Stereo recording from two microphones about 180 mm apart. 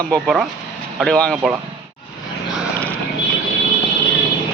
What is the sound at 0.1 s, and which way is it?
Speech, centre (ahead or behind).